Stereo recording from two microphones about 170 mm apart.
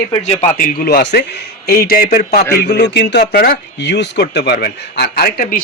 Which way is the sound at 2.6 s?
75° left (ahead or behind).